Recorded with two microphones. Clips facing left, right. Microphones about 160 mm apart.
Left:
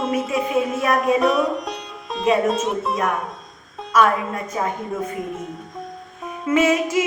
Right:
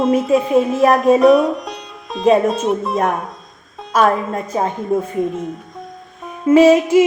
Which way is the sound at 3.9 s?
30° right (ahead or behind).